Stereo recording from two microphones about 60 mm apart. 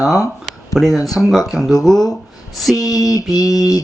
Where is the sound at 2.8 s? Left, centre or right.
Left.